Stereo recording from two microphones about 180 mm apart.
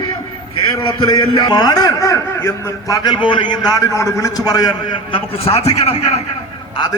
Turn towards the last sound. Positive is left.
turn(degrees=35)  # may be behind; listen again after turning